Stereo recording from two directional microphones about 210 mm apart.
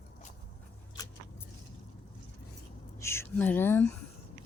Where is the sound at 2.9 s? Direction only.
10° left (ahead or behind).